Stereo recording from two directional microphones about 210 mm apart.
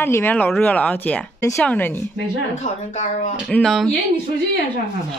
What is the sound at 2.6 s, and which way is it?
Speech, 35° left (ahead or behind).